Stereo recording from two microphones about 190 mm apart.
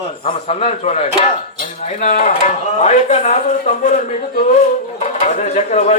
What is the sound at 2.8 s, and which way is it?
Speech, 40° left (ahead or behind).